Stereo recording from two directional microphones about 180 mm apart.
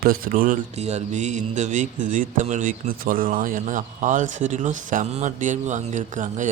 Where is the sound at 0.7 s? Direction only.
40° right (ahead or behind).